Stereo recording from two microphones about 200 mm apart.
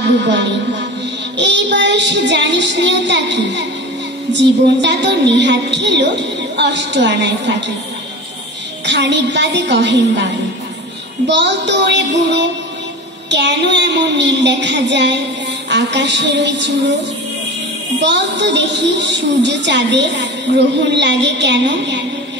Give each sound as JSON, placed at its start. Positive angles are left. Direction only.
{"t": 1.3, "sound": "a woman's voice", "side_deg": -60}
{"t": 8.8, "sound": "a woman's voice", "side_deg": -60}
{"t": 18.0, "sound": "a woman's voice", "side_deg": -60}